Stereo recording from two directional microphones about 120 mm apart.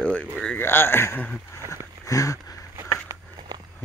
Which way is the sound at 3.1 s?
25° right (ahead or behind).